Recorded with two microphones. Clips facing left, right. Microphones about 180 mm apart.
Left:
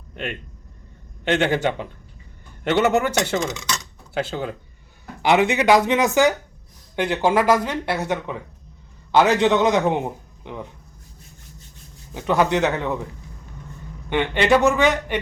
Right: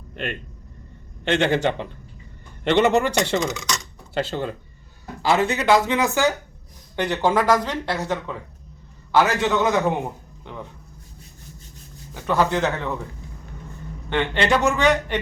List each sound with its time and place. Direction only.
1.3 s speech: 15° left (ahead or behind)
5.2 s a man's voice: 20° left (ahead or behind)
12.1 s speech: 15° left (ahead or behind)
14.1 s speech: 15° left (ahead or behind)